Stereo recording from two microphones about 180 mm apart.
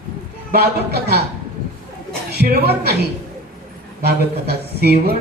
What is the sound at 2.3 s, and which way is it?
Speech, 60° right (ahead or behind).